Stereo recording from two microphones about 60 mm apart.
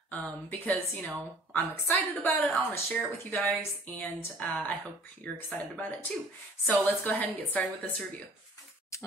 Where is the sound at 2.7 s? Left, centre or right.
Left.